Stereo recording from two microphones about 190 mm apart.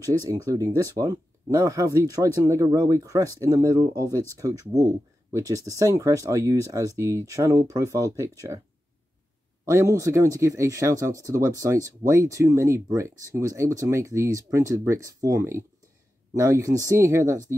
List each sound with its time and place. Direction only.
0.0 s speech: 15° right (ahead or behind)
9.7 s speech: 15° right (ahead or behind)